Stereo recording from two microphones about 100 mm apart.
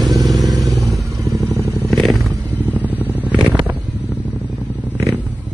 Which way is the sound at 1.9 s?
Centre (ahead or behind).